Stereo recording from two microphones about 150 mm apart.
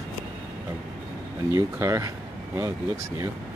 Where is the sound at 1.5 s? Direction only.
20° right (ahead or behind).